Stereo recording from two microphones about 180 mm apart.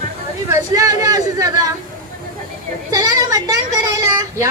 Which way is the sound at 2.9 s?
20° right (ahead or behind).